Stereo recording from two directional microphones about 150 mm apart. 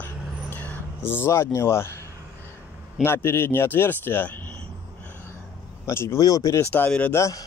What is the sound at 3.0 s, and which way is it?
Speech, 15° left (ahead or behind).